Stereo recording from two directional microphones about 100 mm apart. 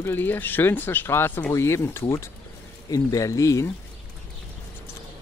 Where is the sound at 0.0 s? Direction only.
20° left (ahead or behind).